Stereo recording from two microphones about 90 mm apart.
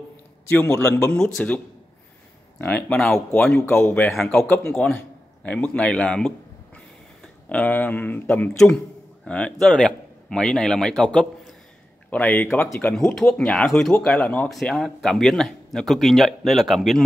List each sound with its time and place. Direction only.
0.5 s speech: 20° left (ahead or behind)
1.1 s a man's voice: 5° left (ahead or behind)
2.9 s a man's voice: 10° left (ahead or behind)
7.4 s a man's voice: 15° left (ahead or behind)
8.5 s a man's voice: 5° left (ahead or behind)
12.9 s a man's voice: 5° left (ahead or behind)
14.5 s speech: centre (ahead or behind)